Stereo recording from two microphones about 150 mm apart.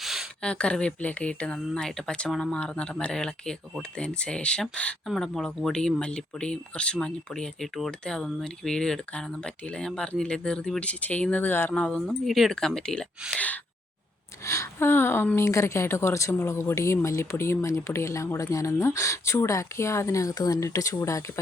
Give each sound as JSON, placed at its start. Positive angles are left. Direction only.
{"t": 0.0, "sound": "a sound", "side_deg": 0}
{"t": 0.5, "sound": "speech", "side_deg": 5}
{"t": 14.4, "sound": "a woman's voice", "side_deg": 20}